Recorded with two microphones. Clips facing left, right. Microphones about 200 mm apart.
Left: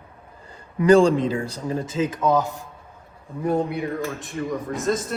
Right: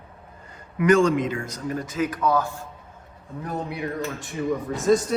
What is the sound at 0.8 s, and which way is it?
Speech, 30° left (ahead or behind).